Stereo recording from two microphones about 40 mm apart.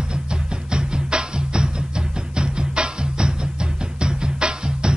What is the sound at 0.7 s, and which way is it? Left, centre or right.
Music, right.